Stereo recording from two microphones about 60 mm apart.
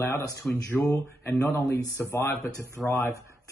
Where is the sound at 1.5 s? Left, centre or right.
Left.